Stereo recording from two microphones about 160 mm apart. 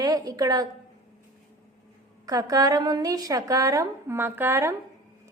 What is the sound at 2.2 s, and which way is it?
A woman's voice, 20° right (ahead or behind).